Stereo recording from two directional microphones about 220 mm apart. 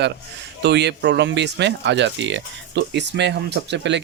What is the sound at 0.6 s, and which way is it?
Speech, 50° right (ahead or behind).